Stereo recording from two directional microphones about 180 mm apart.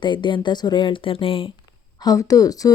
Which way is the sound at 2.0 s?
20° left (ahead or behind).